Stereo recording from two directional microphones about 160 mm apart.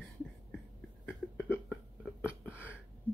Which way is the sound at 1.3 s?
10° left (ahead or behind).